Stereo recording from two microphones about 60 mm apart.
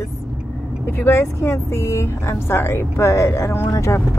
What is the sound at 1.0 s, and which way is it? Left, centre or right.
Speech, left.